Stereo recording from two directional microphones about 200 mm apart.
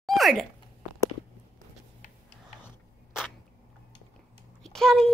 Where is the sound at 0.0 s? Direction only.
Centre (ahead or behind).